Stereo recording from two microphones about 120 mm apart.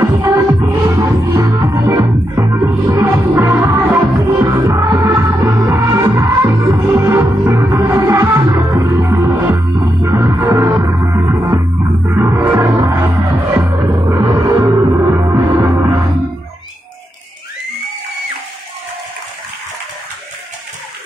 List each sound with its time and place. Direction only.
0.0 s music: 30° right (ahead or behind)
0.7 s music: 15° right (ahead or behind)
1.6 s music: 30° right (ahead or behind)